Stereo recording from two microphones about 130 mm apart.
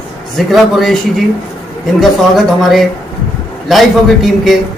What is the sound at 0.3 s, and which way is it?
Speech, centre (ahead or behind).